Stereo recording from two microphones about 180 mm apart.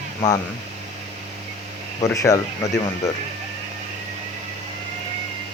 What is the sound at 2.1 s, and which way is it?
Speech, 20° left (ahead or behind).